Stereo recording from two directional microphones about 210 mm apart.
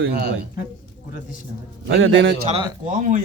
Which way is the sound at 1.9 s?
65° right (ahead or behind).